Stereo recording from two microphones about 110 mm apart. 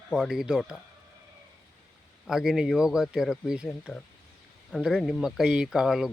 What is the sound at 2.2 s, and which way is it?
A man's voice, 5° right (ahead or behind).